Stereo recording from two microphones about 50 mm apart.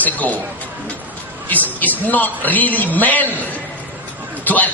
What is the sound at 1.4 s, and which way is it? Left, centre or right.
A man's voice, left.